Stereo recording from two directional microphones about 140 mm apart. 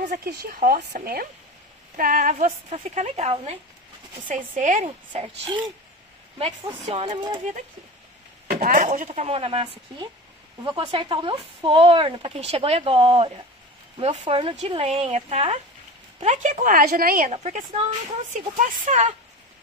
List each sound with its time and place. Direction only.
0.0 s a woman's voice: 75° right (ahead or behind)
2.0 s a woman's voice: 70° right (ahead or behind); by 3.5 s 45° right (ahead or behind)
4.3 s a woman's voice: 65° right (ahead or behind)
4.8 s speech: 35° right (ahead or behind)
6.7 s speech: 40° right (ahead or behind)
8.5 s a woman's voice: 75° right (ahead or behind)
17.3 s a woman's voice: 55° right (ahead or behind)